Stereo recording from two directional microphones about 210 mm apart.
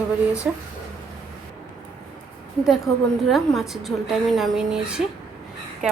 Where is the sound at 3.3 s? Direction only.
Centre (ahead or behind).